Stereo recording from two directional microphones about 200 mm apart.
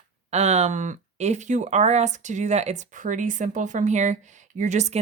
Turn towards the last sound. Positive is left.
turn(degrees=-35)  # may be behind; listen again after turning